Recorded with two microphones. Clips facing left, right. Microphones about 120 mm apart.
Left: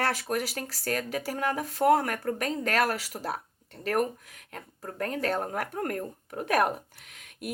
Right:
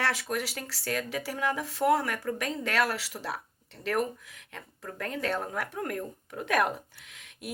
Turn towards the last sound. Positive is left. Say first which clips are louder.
# left 4 dB
turn(degrees=45)  # may be behind; listen again after turning